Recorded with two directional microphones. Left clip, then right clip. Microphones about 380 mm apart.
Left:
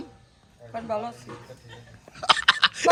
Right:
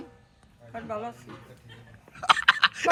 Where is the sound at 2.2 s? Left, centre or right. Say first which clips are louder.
Left 1 dB; centre.